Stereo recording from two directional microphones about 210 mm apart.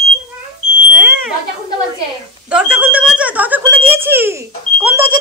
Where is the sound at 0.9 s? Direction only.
5° right (ahead or behind).